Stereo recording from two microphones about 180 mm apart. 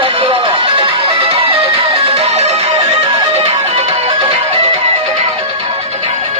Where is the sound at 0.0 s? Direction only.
30° right (ahead or behind).